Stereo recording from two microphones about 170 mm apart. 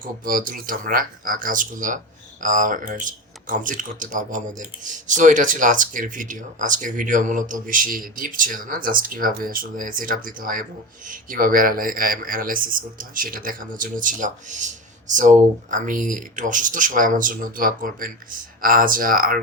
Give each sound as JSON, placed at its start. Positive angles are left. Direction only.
{"t": 0.0, "sound": "speech", "side_deg": -55}